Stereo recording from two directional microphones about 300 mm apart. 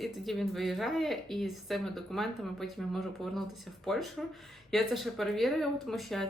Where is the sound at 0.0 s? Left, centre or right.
Centre.